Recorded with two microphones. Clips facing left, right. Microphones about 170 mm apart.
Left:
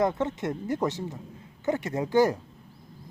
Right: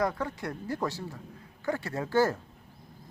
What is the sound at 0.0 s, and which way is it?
Speech, 25° left (ahead or behind).